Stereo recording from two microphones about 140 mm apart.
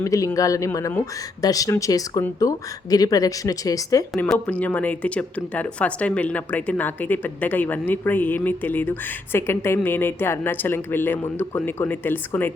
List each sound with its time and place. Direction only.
0.0 s speech: 20° left (ahead or behind)
4.3 s speech: 10° left (ahead or behind)